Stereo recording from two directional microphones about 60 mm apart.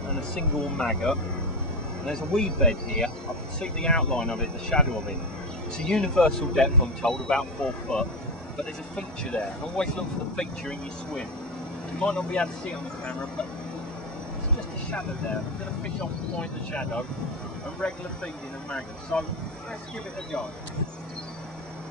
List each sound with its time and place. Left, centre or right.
0.7 s speech: centre
5.9 s speech: centre
16.3 s speech: centre
19.1 s speech: left